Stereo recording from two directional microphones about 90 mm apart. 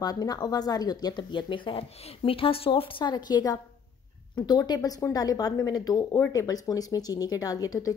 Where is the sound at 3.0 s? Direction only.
55° left (ahead or behind).